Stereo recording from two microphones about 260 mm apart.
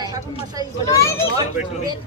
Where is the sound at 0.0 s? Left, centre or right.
Centre.